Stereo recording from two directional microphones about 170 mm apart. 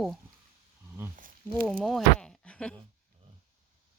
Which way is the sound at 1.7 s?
Centre (ahead or behind).